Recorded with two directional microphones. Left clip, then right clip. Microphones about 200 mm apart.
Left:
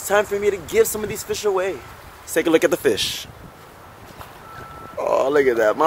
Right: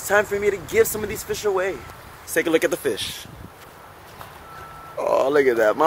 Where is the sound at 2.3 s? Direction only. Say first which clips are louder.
Left 3 dB; 25° left (ahead or behind).